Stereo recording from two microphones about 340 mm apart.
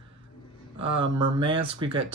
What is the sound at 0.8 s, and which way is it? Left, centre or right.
Speech, centre.